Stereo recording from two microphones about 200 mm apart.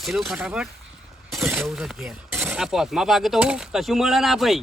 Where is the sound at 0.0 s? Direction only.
Centre (ahead or behind).